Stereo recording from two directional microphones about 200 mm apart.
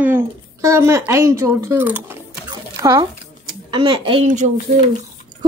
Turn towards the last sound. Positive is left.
turn(degrees=-40)  # may be behind; listen again after turning